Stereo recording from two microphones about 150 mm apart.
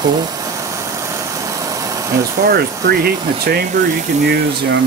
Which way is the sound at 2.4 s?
85° right.